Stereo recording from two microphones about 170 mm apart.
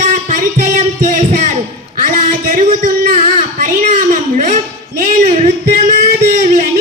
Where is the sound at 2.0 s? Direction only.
55° right (ahead or behind).